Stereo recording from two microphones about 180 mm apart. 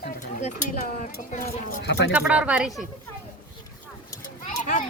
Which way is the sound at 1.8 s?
70° left (ahead or behind).